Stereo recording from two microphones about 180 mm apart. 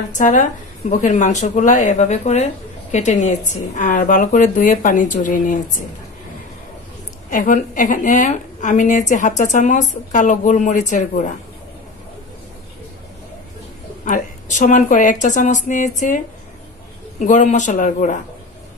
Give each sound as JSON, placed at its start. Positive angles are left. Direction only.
{"t": 0.1, "sound": "speech", "side_deg": 45}
{"t": 7.2, "sound": "speech", "side_deg": 45}
{"t": 14.0, "sound": "speech", "side_deg": 45}
{"t": 17.2, "sound": "speech", "side_deg": 40}